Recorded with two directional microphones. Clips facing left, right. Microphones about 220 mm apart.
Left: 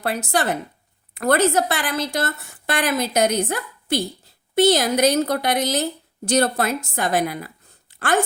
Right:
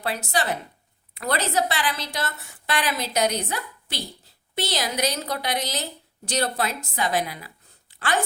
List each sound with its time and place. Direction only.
0.0 s a woman's voice: 50° left (ahead or behind)